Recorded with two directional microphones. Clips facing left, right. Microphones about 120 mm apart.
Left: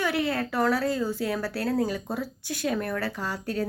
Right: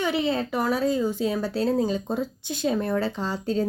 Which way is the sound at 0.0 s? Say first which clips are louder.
Right 2 dB; 20° right (ahead or behind).